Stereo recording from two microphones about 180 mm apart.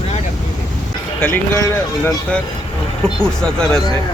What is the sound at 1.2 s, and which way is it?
Speech, 15° left (ahead or behind).